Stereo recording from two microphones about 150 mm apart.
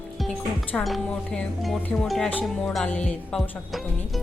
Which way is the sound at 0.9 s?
5° left (ahead or behind).